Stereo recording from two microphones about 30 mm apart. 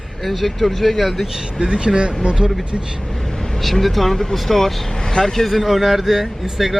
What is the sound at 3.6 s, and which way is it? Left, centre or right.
Speech, centre.